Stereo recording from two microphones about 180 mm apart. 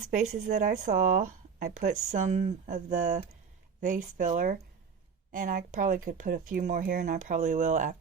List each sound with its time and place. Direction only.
0.1 s speech: 45° right (ahead or behind)